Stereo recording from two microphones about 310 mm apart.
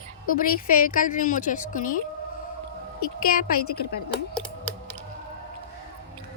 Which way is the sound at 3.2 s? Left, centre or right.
Left.